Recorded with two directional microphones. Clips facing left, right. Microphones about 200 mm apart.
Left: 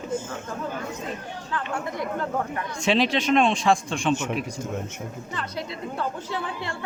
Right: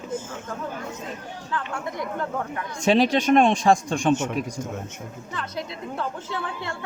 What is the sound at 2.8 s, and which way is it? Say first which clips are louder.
Speech: right 3 dB; 40° right (ahead or behind).